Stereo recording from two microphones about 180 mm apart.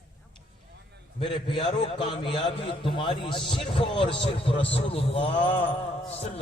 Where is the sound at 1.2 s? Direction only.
30° left (ahead or behind).